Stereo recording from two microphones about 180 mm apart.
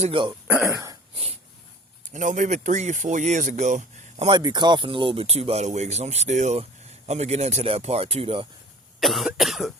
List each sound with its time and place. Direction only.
0.0 s speech: 30° right (ahead or behind)
0.4 s speech: 10° right (ahead or behind)
1.1 s a sound: 35° right (ahead or behind)
2.1 s speech: 45° right (ahead or behind)
4.3 s speech: 25° right (ahead or behind)
9.0 s cough: centre (ahead or behind)